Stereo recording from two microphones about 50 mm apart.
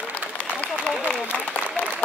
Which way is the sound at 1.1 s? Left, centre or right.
Left.